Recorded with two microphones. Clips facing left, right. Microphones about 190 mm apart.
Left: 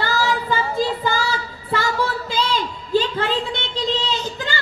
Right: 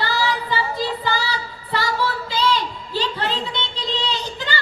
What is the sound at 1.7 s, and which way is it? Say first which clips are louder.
Singing: left 1 dB; 50° left (ahead or behind).